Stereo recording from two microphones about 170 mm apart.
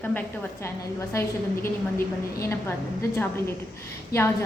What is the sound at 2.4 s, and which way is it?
Speech, 15° left (ahead or behind).